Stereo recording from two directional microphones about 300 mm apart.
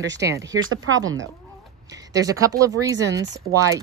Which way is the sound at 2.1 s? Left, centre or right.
Centre.